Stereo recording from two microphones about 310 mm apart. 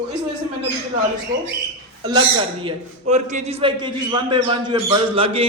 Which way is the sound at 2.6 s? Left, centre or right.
Right.